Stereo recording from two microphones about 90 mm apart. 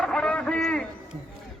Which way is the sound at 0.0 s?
5° left (ahead or behind).